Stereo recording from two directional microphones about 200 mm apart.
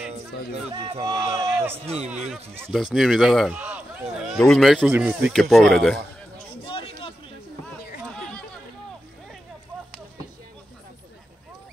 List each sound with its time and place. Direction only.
0.7 s a man's voice: 25° right (ahead or behind); by 4.9 s centre (ahead or behind)
4.9 s a man's voice: 10° right (ahead or behind)
5.3 s a man's voice: centre (ahead or behind)
6.6 s a sound: 25° left (ahead or behind)
8.0 s chatter: 5° left (ahead or behind)